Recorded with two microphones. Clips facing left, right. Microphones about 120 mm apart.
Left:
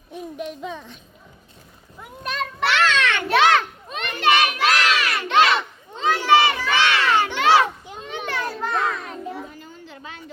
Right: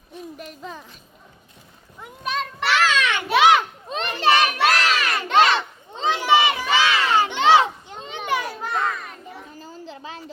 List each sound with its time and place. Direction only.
0.3 s speech: centre (ahead or behind)
2.0 s children playing: centre (ahead or behind)
3.8 s children playing: 30° right (ahead or behind)
4.6 s crowd: 40° right (ahead or behind)
6.0 s children playing: 20° right (ahead or behind)
8.3 s children playing: 10° right (ahead or behind)
9.6 s a sound: 35° right (ahead or behind)